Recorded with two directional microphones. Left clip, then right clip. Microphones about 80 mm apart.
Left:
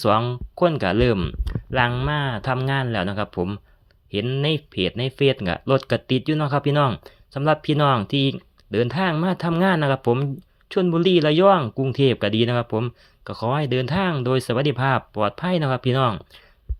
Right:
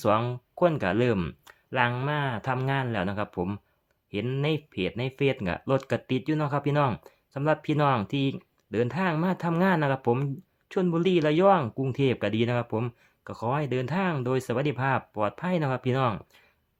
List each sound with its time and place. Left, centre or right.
0.5 s speech: left
1.5 s a sound: left
2.0 s speech: left